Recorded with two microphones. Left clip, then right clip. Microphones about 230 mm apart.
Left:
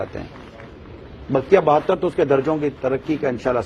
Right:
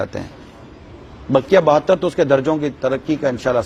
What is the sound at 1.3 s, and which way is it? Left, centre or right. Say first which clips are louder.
A man's voice: right 3 dB; right.